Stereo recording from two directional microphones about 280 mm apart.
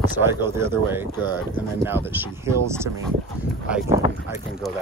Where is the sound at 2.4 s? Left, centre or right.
Centre.